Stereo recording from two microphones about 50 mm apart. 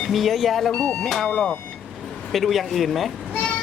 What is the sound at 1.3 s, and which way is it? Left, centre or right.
Speech, left.